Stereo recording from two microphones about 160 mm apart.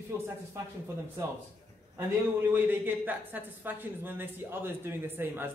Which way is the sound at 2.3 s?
10° right (ahead or behind).